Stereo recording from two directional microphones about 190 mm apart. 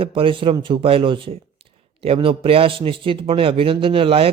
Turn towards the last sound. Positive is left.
turn(degrees=-30)  # may be behind; listen again after turning